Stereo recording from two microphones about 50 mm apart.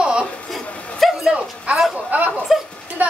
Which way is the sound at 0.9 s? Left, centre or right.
Centre.